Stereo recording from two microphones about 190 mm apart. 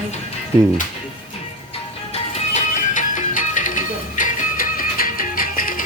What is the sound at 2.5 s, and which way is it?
Music, 40° left (ahead or behind).